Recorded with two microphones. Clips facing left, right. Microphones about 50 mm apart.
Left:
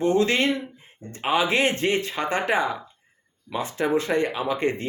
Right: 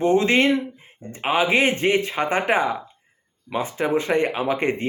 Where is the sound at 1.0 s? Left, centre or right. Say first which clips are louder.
Right 2 dB; centre.